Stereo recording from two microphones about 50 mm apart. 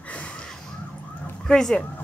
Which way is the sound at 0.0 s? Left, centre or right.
Left.